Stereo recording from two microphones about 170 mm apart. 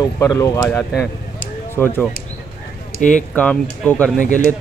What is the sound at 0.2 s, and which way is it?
Speech, 20° left (ahead or behind).